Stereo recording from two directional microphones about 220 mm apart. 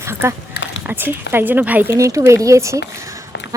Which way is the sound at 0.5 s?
55° left (ahead or behind).